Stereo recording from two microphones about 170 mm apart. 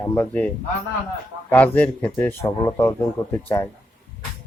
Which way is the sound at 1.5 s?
10° left (ahead or behind).